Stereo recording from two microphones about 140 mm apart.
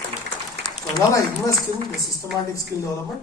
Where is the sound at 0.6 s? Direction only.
25° left (ahead or behind).